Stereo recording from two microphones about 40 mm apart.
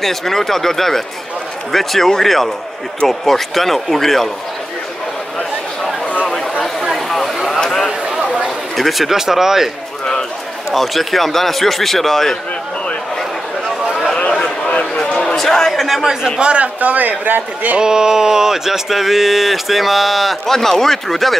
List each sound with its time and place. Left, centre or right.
0.0 s speech: centre
6.8 s a sound: centre
8.2 s chatter: right
8.7 s speech: centre
10.7 s speech: centre
14.4 s a sound: left
15.1 s a man's voice: centre
16.3 s a man's voice: right
17.7 s speech: centre
20.4 s speech: centre